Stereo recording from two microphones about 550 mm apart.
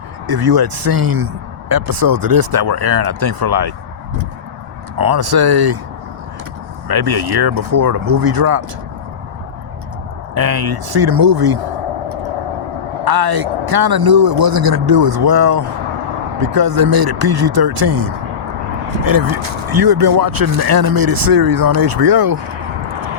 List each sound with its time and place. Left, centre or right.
0.3 s speech: right
4.9 s speech: right
6.8 s speech: right
10.3 s speech: right
13.1 s speech: right